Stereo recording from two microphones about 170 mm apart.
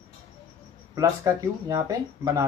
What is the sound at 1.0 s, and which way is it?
Speech, 20° right (ahead or behind).